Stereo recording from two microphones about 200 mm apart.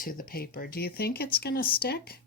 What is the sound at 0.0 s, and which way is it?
Speech, 45° left (ahead or behind).